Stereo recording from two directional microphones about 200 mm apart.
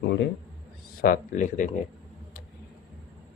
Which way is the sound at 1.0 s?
45° left (ahead or behind).